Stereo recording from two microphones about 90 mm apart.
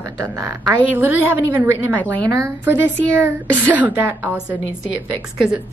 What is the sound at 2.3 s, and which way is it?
A woman's voice, 35° right (ahead or behind).